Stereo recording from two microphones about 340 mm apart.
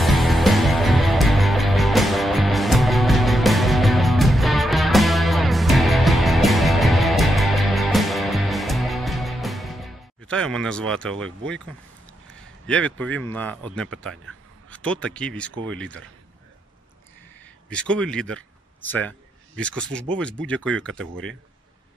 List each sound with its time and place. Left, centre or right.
0.0 s music: centre
12.4 s a man's voice: centre
17.6 s a man's voice: centre